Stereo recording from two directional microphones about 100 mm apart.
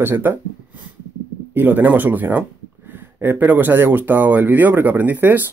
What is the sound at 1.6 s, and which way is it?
Speech, 15° right (ahead or behind).